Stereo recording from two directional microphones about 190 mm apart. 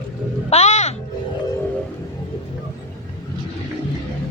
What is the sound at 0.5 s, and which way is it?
Speech, 35° left (ahead or behind).